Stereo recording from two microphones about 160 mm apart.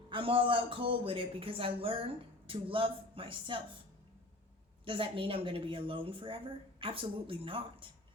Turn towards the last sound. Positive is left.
turn(degrees=-35)  # may be behind; listen again after turning